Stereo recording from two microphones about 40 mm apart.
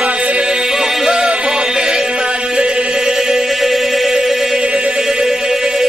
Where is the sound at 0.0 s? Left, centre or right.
Right.